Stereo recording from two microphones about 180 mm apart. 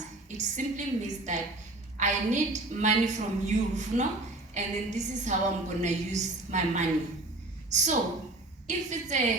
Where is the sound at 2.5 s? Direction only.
40° right (ahead or behind).